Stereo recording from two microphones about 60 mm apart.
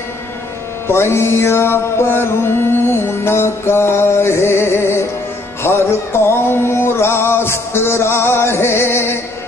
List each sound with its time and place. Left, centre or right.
0.8 s music: left